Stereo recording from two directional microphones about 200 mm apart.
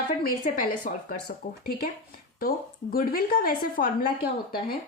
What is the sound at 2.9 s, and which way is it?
A woman's voice, 45° left (ahead or behind).